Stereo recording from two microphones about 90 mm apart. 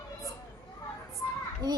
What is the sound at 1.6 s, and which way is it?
Speech, 50° right (ahead or behind).